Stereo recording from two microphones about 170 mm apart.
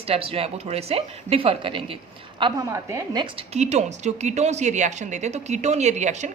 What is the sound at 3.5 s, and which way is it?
A woman's voice, 40° right (ahead or behind).